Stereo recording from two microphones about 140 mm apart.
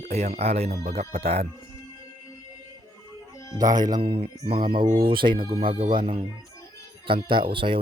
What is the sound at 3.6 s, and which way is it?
Speech, 25° right (ahead or behind).